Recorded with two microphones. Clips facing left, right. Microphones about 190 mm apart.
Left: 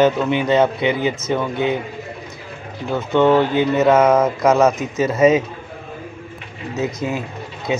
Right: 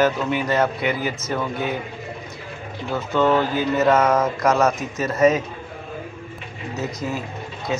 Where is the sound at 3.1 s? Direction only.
25° left (ahead or behind).